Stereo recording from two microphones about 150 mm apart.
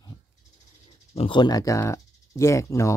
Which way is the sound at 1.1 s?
35° left (ahead or behind).